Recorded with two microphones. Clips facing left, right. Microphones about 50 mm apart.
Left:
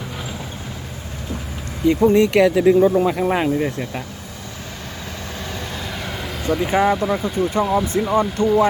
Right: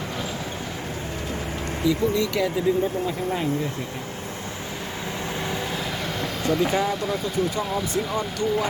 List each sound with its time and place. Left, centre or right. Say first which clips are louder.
1.8 s speech: left 8 dB; left
2.4 s speech: left 8 dB; left
5.7 s vehicle: even; centre
6.9 s speech: left 5 dB; centre
8.1 s speech: left 10 dB; left